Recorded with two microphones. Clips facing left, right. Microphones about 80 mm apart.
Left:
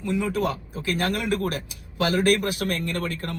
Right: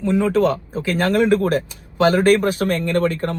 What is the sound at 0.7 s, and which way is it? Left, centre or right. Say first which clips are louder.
Speech: right 7 dB; right.